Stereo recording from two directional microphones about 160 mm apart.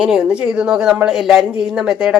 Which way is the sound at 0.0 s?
5° right (ahead or behind).